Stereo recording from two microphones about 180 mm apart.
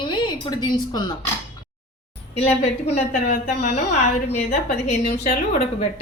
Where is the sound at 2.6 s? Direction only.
35° left (ahead or behind).